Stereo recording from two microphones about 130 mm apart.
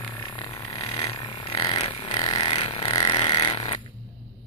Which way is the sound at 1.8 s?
50° left (ahead or behind).